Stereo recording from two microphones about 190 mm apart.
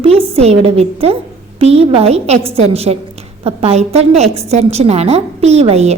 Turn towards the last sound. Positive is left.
turn(degrees=-35)  # may be behind; listen again after turning